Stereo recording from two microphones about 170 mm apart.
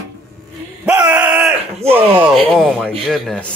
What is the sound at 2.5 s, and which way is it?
Speech, centre (ahead or behind).